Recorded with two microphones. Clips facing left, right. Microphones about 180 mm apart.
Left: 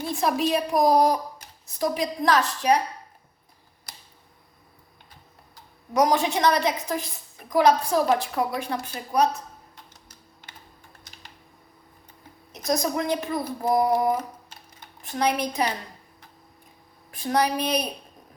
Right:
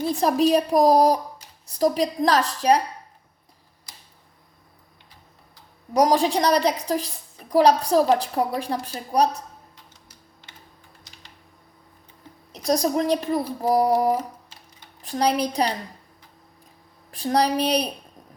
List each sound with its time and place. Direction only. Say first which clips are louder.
0.0 s a woman's voice: right 5 dB; 35° right (ahead or behind)
6.0 s a woman's voice: right 2 dB; 35° right (ahead or behind)
12.5 s a woman's voice: right 4 dB; 35° right (ahead or behind)
15.0 s a woman's voice: right 3 dB; 35° right (ahead or behind)
17.1 s a woman's voice: right 2 dB; 35° right (ahead or behind)